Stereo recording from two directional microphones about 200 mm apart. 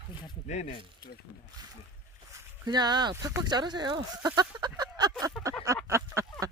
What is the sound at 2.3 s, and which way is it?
Speech, 20° right (ahead or behind).